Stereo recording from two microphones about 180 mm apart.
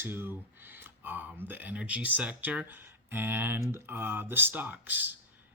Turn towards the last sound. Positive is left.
turn(degrees=-10)  # may be behind; listen again after turning